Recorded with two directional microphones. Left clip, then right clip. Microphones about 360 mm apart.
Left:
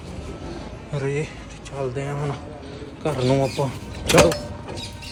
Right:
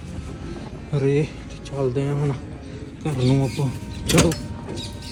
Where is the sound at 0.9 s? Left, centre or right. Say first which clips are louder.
Right 5 dB; centre.